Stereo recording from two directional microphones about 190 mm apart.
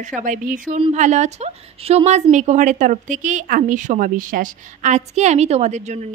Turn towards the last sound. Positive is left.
turn(degrees=-35)  # may be behind; listen again after turning